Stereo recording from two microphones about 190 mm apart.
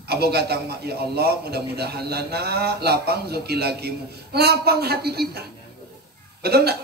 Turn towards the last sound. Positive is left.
turn(degrees=-55)  # may be behind; listen again after turning